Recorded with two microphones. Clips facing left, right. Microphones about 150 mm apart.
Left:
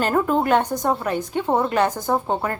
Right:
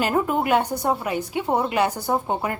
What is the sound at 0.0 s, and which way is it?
A woman's voice, 10° right (ahead or behind).